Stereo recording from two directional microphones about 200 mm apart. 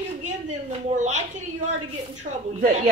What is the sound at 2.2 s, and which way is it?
Speech, 40° right (ahead or behind).